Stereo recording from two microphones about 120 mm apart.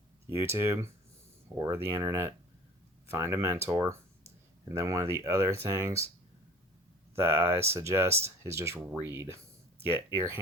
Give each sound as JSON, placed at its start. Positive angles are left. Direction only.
{"t": 0.3, "sound": "speech", "side_deg": -20}
{"t": 1.5, "sound": "speech", "side_deg": -30}
{"t": 1.8, "sound": "speech", "side_deg": -20}
{"t": 7.2, "sound": "speech", "side_deg": -20}
{"t": 8.8, "sound": "speech", "side_deg": -10}